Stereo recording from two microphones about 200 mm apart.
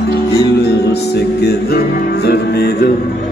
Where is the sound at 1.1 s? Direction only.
55° left (ahead or behind).